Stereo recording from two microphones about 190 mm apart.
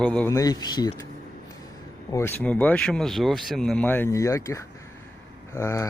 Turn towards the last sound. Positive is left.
turn(degrees=10)  # may be behind; listen again after turning